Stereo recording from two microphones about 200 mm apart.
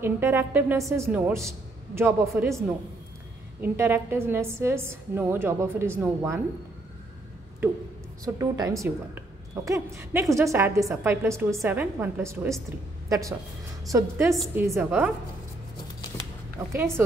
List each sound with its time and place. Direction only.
0.0 s a woman's voice: 10° right (ahead or behind)
3.6 s a woman's voice: 10° right (ahead or behind)
7.6 s a woman's voice: 10° right (ahead or behind)
13.9 s a woman's voice: 15° right (ahead or behind)
16.7 s a woman's voice: 15° right (ahead or behind)